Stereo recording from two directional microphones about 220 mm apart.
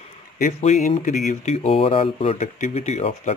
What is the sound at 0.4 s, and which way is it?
Speech, 30° left (ahead or behind).